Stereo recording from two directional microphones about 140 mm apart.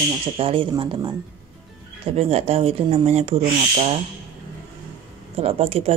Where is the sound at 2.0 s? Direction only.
45° right (ahead or behind).